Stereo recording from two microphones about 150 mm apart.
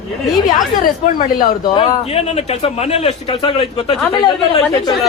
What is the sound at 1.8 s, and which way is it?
A woman's voice, 45° left (ahead or behind).